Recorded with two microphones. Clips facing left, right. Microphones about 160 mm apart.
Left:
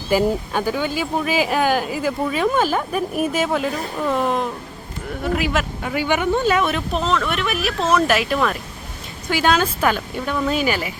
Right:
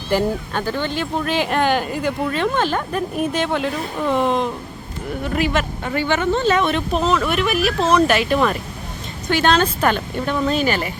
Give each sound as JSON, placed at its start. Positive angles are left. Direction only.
{"t": 0.1, "sound": "a woman's voice", "side_deg": 10}